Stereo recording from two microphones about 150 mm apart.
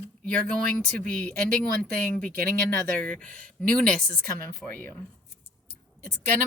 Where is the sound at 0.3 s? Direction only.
5° left (ahead or behind).